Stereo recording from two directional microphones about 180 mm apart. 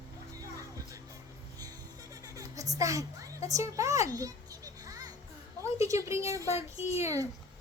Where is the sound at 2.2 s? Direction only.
20° right (ahead or behind).